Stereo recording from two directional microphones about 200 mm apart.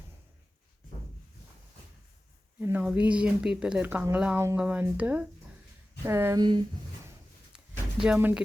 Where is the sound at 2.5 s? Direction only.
10° right (ahead or behind).